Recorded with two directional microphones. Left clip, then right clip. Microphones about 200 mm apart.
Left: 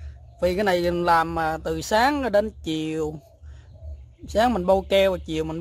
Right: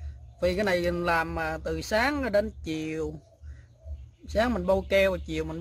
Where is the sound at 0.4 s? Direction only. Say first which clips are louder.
Left 4 dB; 15° left (ahead or behind).